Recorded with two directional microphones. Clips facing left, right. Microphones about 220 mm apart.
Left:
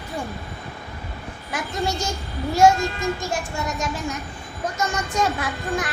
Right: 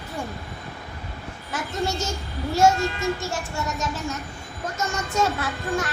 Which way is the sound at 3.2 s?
15° left (ahead or behind).